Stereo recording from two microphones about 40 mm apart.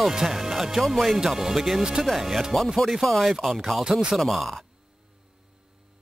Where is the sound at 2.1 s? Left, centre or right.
Centre.